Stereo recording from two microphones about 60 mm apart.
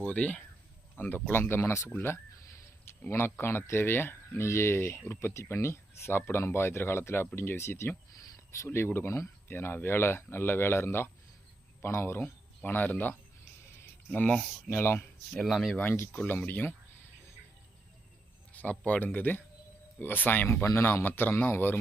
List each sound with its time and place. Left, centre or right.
0.0 s speech: left
1.0 s speech: left
1.9 s speech: left
9.5 s speech: left
12.6 s speech: left
14.7 s speech: left
15.3 s speech: centre
15.7 s speech: left
18.5 s a sound: left
18.9 s speech: left